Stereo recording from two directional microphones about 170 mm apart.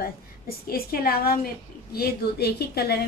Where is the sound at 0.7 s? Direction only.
60° left (ahead or behind).